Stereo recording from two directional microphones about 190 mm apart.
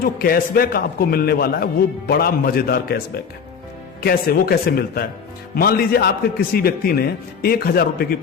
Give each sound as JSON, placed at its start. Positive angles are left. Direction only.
{"t": 0.0, "sound": "a man's voice", "side_deg": 50}
{"t": 4.0, "sound": "a man's voice", "side_deg": 50}